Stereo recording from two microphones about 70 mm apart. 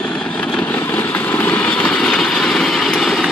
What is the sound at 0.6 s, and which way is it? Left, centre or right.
Vehicle, left.